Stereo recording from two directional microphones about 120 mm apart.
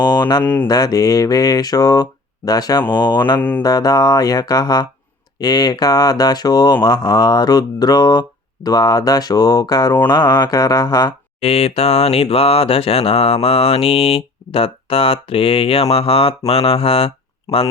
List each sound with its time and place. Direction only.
0.0 s speech: 35° left (ahead or behind)
0.4 s speech: 15° left (ahead or behind)
0.7 s speech: 30° left (ahead or behind)
11.3 s a sound: 60° left (ahead or behind)